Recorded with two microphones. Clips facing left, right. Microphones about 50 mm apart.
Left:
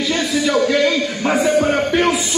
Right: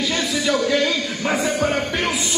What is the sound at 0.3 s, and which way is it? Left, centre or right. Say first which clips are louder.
Music: left 4 dB; centre.